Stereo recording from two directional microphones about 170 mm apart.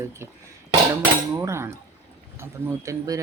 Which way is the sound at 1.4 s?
15° right (ahead or behind).